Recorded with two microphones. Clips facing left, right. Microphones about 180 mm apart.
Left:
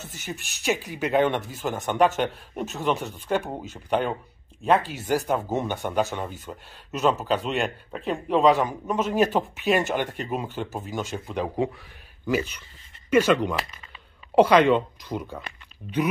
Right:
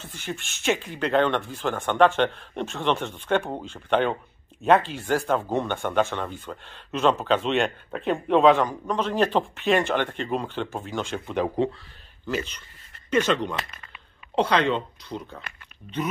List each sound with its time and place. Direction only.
0.0 s speech: 45° left (ahead or behind)
0.3 s a man's voice: 5° left (ahead or behind)
4.9 s a man's voice: 10° left (ahead or behind)